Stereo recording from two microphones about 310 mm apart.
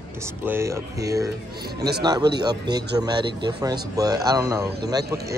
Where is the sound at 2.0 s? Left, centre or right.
Centre.